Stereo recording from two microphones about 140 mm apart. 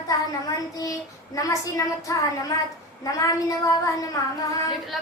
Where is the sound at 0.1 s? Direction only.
25° left (ahead or behind).